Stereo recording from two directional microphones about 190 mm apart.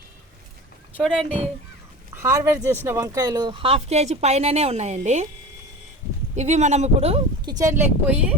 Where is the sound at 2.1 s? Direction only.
15° right (ahead or behind); by 5.3 s 35° right (ahead or behind).